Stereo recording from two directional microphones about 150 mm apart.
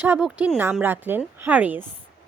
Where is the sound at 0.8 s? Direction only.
15° right (ahead or behind).